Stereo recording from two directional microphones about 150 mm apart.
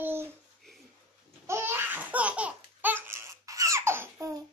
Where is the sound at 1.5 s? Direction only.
15° right (ahead or behind).